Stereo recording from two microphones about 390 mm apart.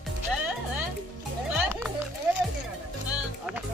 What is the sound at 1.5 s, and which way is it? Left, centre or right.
Music, centre.